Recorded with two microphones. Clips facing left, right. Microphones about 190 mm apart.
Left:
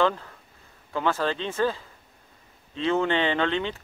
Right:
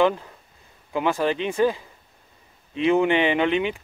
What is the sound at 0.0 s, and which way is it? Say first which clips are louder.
Speech: right 4 dB; 15° right (ahead or behind).